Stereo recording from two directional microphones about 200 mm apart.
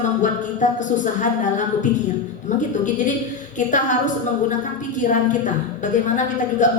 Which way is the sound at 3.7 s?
40° left (ahead or behind).